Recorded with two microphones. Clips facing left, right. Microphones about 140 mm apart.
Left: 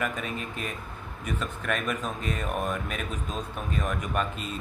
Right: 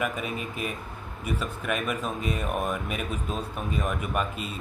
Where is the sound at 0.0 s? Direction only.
10° right (ahead or behind).